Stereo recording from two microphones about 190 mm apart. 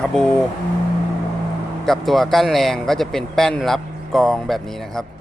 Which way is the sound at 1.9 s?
Centre (ahead or behind).